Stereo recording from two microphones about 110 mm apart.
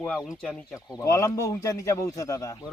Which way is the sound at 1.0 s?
25° left (ahead or behind).